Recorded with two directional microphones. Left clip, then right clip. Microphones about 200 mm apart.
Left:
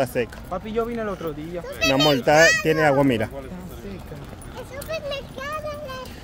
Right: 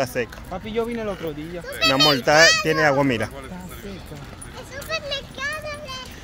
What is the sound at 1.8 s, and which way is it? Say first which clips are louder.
Speech: right 1 dB; 45° left (ahead or behind).